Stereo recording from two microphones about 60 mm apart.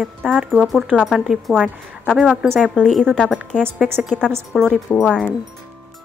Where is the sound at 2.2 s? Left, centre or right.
Centre.